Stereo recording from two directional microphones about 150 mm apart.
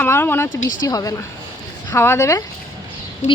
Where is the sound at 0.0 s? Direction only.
15° left (ahead or behind).